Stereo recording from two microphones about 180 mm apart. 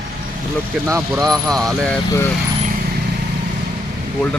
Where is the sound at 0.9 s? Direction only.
15° right (ahead or behind).